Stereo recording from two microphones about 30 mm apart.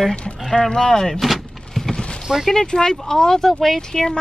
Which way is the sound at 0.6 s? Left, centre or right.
Centre.